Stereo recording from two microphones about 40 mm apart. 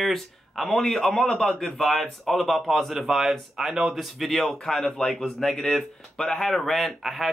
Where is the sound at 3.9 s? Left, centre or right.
Centre.